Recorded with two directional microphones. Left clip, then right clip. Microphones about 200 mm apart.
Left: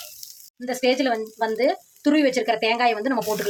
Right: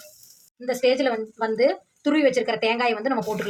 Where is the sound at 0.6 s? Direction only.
25° left (ahead or behind).